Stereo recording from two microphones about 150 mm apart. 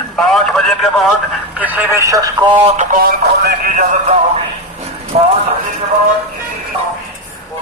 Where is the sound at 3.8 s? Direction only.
55° right (ahead or behind).